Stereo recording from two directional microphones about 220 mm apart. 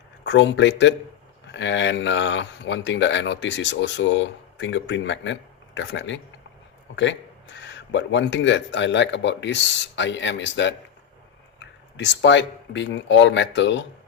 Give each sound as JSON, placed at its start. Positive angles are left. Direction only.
{"t": 0.3, "sound": "speech", "side_deg": 55}
{"t": 11.9, "sound": "speech", "side_deg": 55}